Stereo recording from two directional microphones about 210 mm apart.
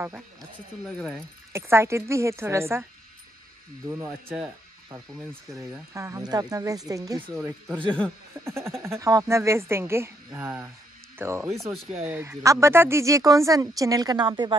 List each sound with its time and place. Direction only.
0.8 s speech: centre (ahead or behind)
1.5 s speech: 10° right (ahead or behind)
3.9 s speech: 10° right (ahead or behind)
5.9 s speech: 15° right (ahead or behind)
7.2 s speech: centre (ahead or behind)
8.5 s speech: 10° right (ahead or behind)